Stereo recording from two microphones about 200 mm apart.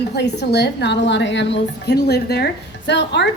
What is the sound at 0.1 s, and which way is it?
A woman's voice, 55° left (ahead or behind).